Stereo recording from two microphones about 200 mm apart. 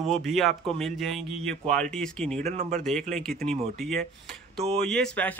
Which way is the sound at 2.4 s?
35° right (ahead or behind).